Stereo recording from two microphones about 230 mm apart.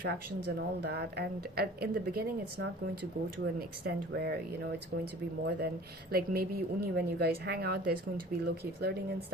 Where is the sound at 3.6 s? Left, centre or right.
Right.